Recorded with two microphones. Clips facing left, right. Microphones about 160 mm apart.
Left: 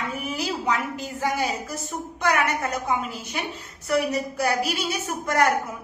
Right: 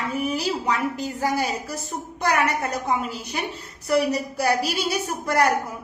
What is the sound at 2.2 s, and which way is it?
Speech, 35° right (ahead or behind).